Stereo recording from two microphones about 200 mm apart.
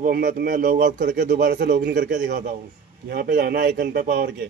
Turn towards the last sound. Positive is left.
turn(degrees=-50)  # may be behind; listen again after turning